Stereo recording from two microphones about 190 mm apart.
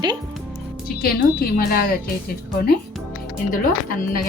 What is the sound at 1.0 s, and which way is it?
Speech, 50° left (ahead or behind).